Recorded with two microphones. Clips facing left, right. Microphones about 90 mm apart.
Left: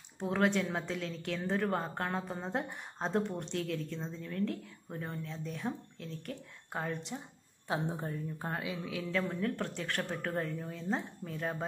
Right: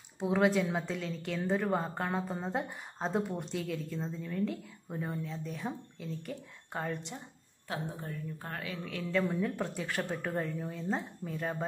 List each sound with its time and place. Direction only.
0.2 s a woman's voice: 5° right (ahead or behind)
7.6 s a woman's voice: 25° left (ahead or behind)
8.9 s a woman's voice: centre (ahead or behind)